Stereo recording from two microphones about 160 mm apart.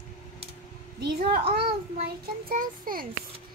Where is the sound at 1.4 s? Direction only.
35° right (ahead or behind).